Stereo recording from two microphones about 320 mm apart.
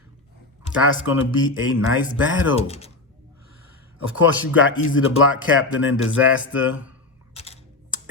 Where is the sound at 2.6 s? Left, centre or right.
Centre.